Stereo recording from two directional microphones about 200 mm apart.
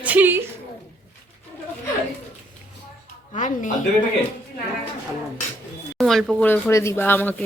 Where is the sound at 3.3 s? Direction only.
40° left (ahead or behind).